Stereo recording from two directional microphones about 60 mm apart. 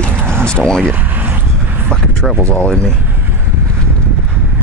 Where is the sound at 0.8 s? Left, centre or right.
Right.